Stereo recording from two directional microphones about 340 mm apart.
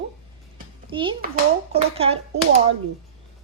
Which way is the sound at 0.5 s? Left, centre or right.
Centre.